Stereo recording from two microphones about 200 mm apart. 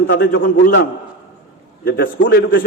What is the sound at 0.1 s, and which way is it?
Speech, 55° left (ahead or behind).